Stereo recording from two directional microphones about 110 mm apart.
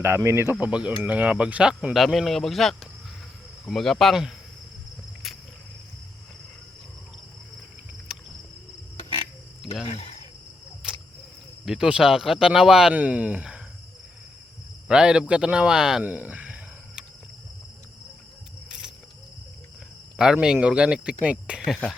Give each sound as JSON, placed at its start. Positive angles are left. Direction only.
{"t": 0.0, "sound": "speech", "side_deg": -25}
{"t": 0.6, "sound": "speech", "side_deg": -10}
{"t": 5.2, "sound": "cricket", "side_deg": 0}
{"t": 9.8, "sound": "speech", "side_deg": 70}
{"t": 10.8, "sound": "cricket", "side_deg": -5}
{"t": 11.6, "sound": "speech", "side_deg": -5}
{"t": 14.8, "sound": "speech", "side_deg": -5}
{"t": 16.0, "sound": "a sound", "side_deg": -15}
{"t": 20.1, "sound": "speech", "side_deg": -5}